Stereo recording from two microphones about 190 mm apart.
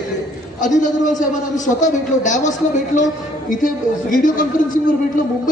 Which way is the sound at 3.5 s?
45° left (ahead or behind).